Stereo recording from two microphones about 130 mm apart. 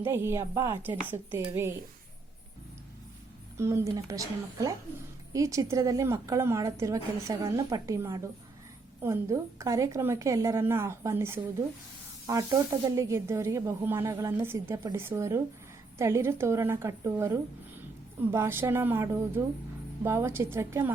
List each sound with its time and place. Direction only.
0.0 s a woman's voice: 20° right (ahead or behind)
3.6 s a woman's voice: 20° right (ahead or behind)